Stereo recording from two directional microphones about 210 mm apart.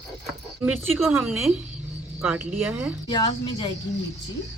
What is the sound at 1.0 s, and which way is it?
A woman's voice, 5° right (ahead or behind).